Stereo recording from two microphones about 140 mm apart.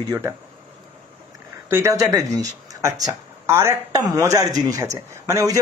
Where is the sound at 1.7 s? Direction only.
20° right (ahead or behind).